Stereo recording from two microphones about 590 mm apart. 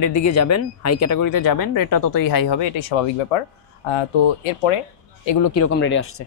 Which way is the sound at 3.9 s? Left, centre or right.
Left.